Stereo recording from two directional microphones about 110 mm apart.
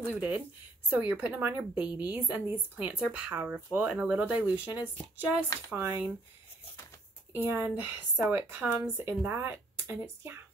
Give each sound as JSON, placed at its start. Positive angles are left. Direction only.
{"t": 0.1, "sound": "speech", "side_deg": -10}
{"t": 7.3, "sound": "speech", "side_deg": -20}